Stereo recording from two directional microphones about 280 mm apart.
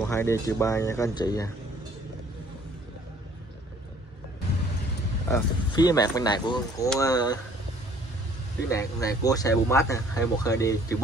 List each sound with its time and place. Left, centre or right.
0.0 s speech: centre
5.3 s speech: centre
8.6 s speech: centre